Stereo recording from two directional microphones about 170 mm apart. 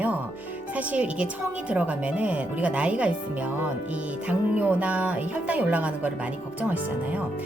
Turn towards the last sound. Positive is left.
turn(degrees=-10)  # may be behind; listen again after turning